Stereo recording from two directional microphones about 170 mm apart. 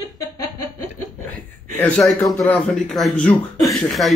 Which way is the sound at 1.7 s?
10° left (ahead or behind).